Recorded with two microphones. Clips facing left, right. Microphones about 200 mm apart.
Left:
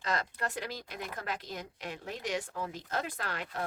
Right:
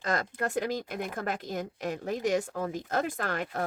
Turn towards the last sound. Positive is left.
turn(degrees=-45)  # may be behind; listen again after turning